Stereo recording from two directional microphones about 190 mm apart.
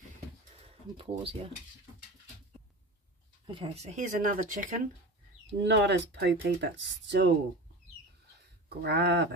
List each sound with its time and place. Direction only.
0.6 s speech: 30° right (ahead or behind)
3.4 s speech: 25° right (ahead or behind); by 4.7 s 45° right (ahead or behind)
5.5 s speech: 60° right (ahead or behind)
8.6 s speech: 60° right (ahead or behind)